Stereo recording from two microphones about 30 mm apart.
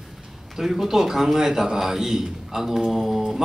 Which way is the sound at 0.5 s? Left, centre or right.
Centre.